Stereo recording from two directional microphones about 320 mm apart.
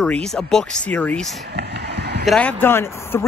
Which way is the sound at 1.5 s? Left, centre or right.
Right.